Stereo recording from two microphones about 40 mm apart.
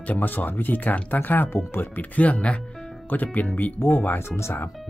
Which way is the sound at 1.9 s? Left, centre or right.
Left.